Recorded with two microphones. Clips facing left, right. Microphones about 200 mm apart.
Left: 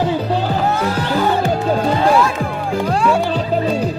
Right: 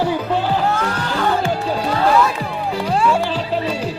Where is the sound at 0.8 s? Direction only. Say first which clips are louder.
Left 4 dB; 10° left (ahead or behind).